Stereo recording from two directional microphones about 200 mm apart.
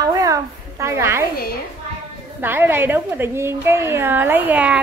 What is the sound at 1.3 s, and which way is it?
Speech, 50° left (ahead or behind).